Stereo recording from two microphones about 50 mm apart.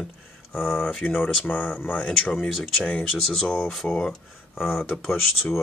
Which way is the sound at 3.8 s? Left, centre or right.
Centre.